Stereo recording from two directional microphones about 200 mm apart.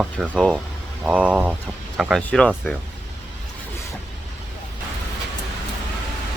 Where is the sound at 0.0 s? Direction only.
Centre (ahead or behind).